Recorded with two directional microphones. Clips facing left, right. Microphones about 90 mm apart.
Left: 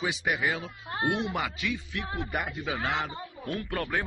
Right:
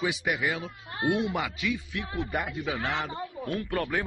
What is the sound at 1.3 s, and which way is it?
Speech, 15° right (ahead or behind).